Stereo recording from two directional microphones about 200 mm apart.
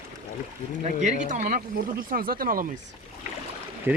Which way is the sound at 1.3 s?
40° right (ahead or behind).